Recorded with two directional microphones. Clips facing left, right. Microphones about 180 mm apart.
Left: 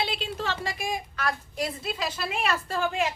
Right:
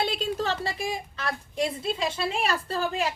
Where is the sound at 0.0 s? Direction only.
45° right (ahead or behind); by 2.0 s 25° right (ahead or behind).